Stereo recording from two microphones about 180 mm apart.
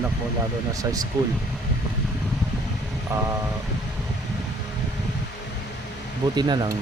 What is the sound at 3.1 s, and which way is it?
Speech, 15° right (ahead or behind).